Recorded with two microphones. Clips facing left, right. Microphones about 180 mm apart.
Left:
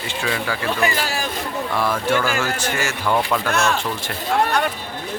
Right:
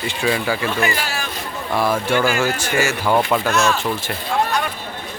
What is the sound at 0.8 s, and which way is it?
Speech, 35° left (ahead or behind).